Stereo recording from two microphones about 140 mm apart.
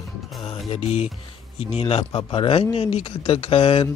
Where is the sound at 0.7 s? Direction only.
45° left (ahead or behind).